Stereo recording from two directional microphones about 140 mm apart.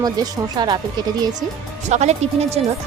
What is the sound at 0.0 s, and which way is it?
Speech, 30° right (ahead or behind).